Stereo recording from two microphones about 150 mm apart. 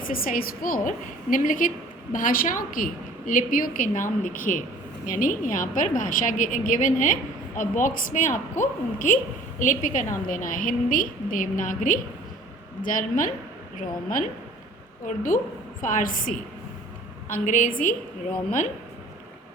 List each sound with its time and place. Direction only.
0.1 s a woman's voice: 75° left (ahead or behind)
15.0 s a woman's voice: 60° left (ahead or behind)
17.4 s a woman's voice: 60° left (ahead or behind)